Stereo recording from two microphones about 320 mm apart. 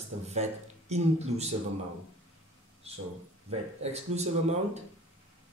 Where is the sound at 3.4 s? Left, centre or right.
Centre.